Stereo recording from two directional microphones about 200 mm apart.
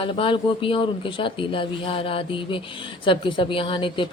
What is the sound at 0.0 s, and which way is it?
Speech, 25° left (ahead or behind).